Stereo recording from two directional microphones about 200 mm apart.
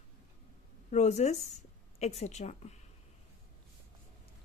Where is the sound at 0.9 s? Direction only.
35° left (ahead or behind).